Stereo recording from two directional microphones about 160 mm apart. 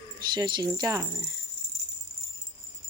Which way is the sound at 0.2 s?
30° right (ahead or behind).